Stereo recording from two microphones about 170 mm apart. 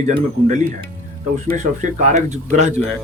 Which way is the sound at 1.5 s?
45° right (ahead or behind).